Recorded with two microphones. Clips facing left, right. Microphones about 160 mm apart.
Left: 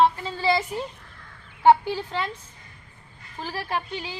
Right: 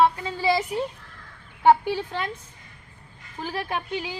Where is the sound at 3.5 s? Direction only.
10° right (ahead or behind).